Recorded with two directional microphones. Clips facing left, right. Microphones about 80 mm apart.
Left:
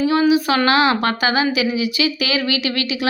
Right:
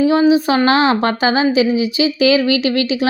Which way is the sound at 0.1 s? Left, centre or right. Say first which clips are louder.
Right 3 dB; right.